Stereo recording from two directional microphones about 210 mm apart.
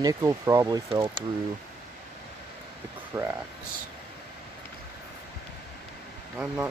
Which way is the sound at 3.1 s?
10° right (ahead or behind).